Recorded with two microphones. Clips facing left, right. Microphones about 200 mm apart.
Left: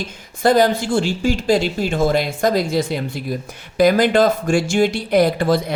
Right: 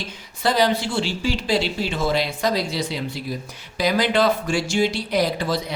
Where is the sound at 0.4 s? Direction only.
50° left (ahead or behind).